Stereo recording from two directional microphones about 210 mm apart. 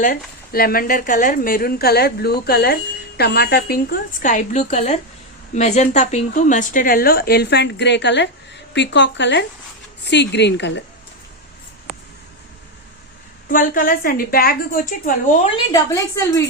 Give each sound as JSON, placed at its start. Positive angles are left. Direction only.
{"t": 0.0, "sound": "a woman's voice", "side_deg": 45}
{"t": 13.5, "sound": "a woman's voice", "side_deg": 40}
{"t": 15.7, "sound": "a woman's voice", "side_deg": 15}